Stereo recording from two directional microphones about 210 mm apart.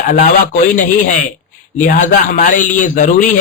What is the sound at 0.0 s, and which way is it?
Speech, 40° left (ahead or behind).